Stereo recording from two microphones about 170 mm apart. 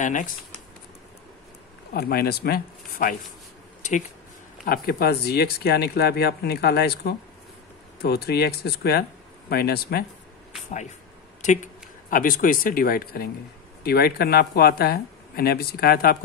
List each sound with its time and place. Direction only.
0.0 s speech: 50° left (ahead or behind)
2.0 s speech: 65° left (ahead or behind)
4.6 s speech: 65° left (ahead or behind)
11.4 s speech: 45° left (ahead or behind); by 16.2 s 60° left (ahead or behind)